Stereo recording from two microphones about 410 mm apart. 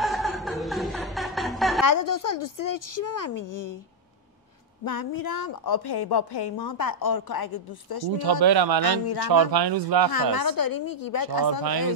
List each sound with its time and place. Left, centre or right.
0.0 s chuckle: centre
1.9 s a woman's voice: left
4.8 s a woman's voice: left
8.2 s speech: right
8.8 s speech: left
9.3 s speech: right
10.3 s a woman's voice: left